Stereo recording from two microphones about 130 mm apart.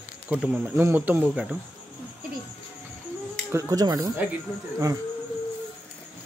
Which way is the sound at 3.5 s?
20° right (ahead or behind).